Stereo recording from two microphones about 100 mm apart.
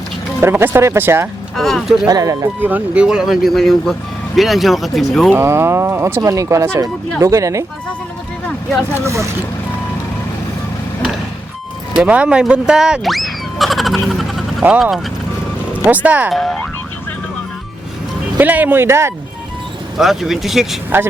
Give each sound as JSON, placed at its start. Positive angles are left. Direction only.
{"t": 0.4, "sound": "speech", "side_deg": -25}
{"t": 1.5, "sound": "speech", "side_deg": 5}
{"t": 2.0, "sound": "speech", "side_deg": -35}
{"t": 2.6, "sound": "speech", "side_deg": -15}
{"t": 5.3, "sound": "speech", "side_deg": -25}
{"t": 9.0, "sound": "speech", "side_deg": -30}
{"t": 11.9, "sound": "speech", "side_deg": -10}
{"t": 15.8, "sound": "speech", "side_deg": -15}
{"t": 16.3, "sound": "speech", "side_deg": 0}
{"t": 18.3, "sound": "speech", "side_deg": -15}
{"t": 20.0, "sound": "speech", "side_deg": -5}